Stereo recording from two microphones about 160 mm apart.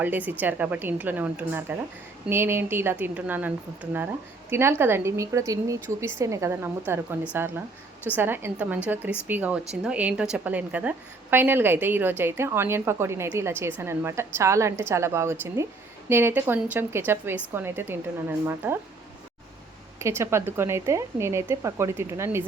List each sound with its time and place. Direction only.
0.0 s a woman's voice: 10° right (ahead or behind)
20.0 s a woman's voice: 15° right (ahead or behind)